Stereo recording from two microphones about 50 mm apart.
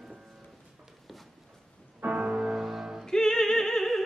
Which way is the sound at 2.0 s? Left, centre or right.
Right.